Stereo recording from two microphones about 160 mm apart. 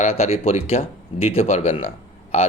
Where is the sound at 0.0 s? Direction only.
40° left (ahead or behind).